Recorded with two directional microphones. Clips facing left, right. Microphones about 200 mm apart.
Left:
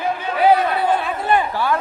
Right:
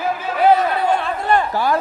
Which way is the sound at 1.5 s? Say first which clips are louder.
Right 2 dB; 40° right (ahead or behind).